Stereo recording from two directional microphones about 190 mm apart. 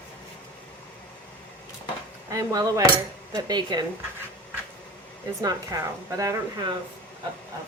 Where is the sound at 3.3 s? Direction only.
20° right (ahead or behind).